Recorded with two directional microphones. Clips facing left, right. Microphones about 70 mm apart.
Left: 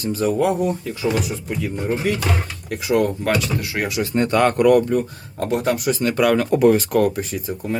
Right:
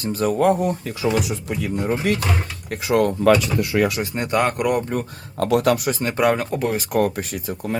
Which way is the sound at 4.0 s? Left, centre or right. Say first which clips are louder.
Left 3 dB; centre.